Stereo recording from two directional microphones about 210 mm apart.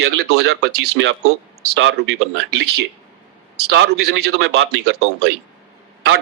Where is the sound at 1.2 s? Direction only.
90° right.